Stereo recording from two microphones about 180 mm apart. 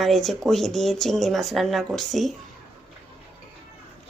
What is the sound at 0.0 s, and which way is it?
A woman's voice, centre (ahead or behind).